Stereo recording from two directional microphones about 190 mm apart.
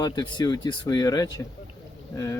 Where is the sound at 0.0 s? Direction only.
20° left (ahead or behind).